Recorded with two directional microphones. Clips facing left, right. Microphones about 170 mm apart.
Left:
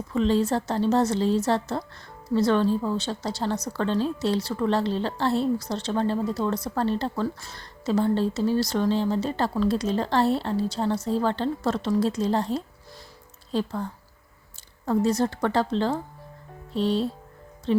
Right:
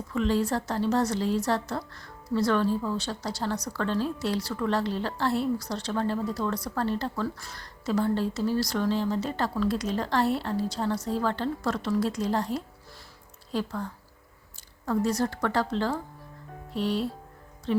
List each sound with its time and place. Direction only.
0.1 s a woman's voice: 25° left (ahead or behind)
14.8 s a woman's voice: 25° left (ahead or behind)